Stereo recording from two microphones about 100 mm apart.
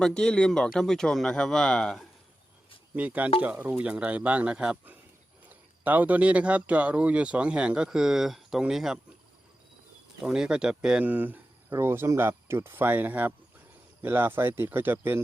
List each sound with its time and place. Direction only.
0.0 s speech: 10° left (ahead or behind)
2.9 s speech: 15° right (ahead or behind)
10.2 s speech: 5° right (ahead or behind)